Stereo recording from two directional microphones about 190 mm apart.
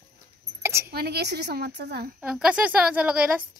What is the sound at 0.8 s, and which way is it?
A woman's voice, 55° right (ahead or behind).